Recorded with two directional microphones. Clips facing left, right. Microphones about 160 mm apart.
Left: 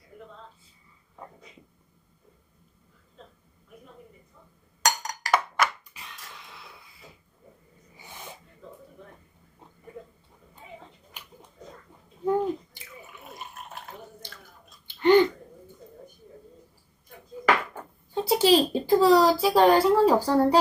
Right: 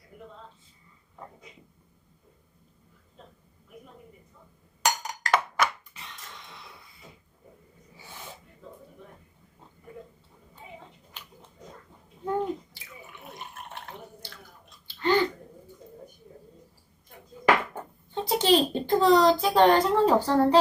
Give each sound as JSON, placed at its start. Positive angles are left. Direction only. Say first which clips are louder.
{"t": 5.0, "sound": "music", "louder": "left 1 dB", "side_deg": -5}
{"t": 5.9, "sound": "dog", "louder": "even", "side_deg": 5}
{"t": 7.9, "sound": "sneeze", "louder": "left 1 dB", "side_deg": 15}
{"t": 11.2, "sound": "a sound", "louder": "even", "side_deg": 15}
{"t": 12.2, "sound": "bathtub", "louder": "left 4 dB", "side_deg": 10}
{"t": 12.8, "sound": "drip", "louder": "even", "side_deg": 0}
{"t": 14.8, "sound": "chewing", "louder": "left 6 dB", "side_deg": 20}
{"t": 18.1, "sound": "a child's voice", "louder": "left 2 dB", "side_deg": 10}